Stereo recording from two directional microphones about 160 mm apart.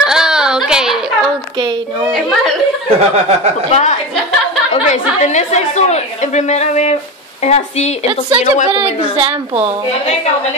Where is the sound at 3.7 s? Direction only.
45° left (ahead or behind).